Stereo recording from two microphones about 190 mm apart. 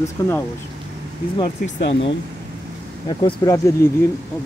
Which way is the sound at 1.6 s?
70° left (ahead or behind).